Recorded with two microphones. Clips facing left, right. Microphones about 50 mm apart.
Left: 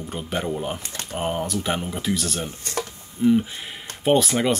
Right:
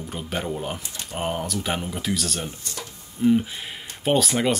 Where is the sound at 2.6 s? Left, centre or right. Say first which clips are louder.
Left 7 dB; left.